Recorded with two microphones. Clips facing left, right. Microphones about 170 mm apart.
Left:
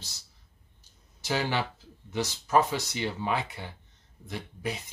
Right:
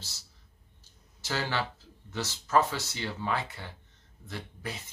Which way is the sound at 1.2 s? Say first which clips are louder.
Left 3 dB; 15° left (ahead or behind).